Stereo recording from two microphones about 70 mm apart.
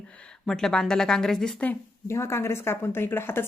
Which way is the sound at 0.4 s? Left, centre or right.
Centre.